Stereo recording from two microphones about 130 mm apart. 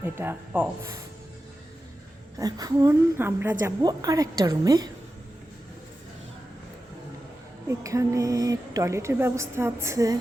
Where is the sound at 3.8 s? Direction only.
30° right (ahead or behind).